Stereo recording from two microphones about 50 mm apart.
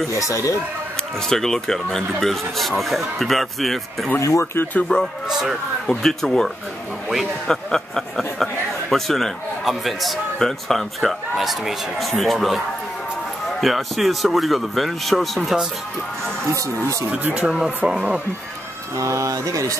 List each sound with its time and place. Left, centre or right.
0.1 s speech: left
1.3 s speech: centre
4.2 s speech: left
4.9 s speech: centre
5.3 s speech: centre
5.9 s speech: centre
16.5 s speech: right
17.1 s speech: right
17.8 s speech: centre
19.0 s speech: right